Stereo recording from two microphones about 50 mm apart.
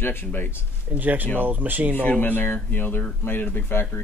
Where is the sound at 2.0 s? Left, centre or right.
Left.